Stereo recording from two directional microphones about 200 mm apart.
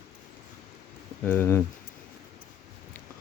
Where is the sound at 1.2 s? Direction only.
10° left (ahead or behind).